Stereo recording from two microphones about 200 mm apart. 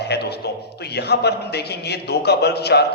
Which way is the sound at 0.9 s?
55° left (ahead or behind).